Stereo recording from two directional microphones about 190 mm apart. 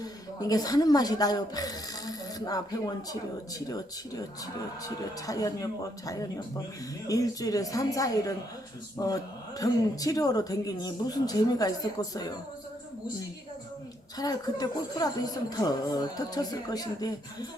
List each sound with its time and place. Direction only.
0.0 s speech: 20° left (ahead or behind)
14.2 s speech: 20° left (ahead or behind)